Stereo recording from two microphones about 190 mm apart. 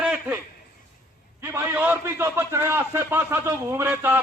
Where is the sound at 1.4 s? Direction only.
10° right (ahead or behind).